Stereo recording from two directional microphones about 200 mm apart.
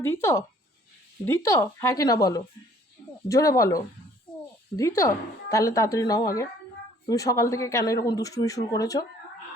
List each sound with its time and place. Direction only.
0.0 s speech: 10° left (ahead or behind)